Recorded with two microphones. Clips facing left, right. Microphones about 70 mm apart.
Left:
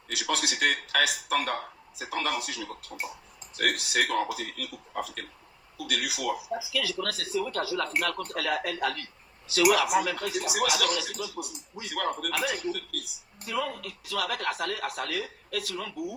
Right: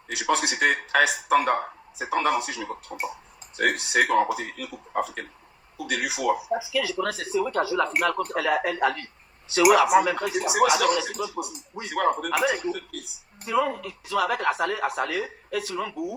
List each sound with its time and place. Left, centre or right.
0.1 s a man's voice: right